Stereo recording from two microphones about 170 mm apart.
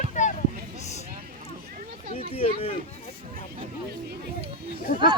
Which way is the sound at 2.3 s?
35° left (ahead or behind).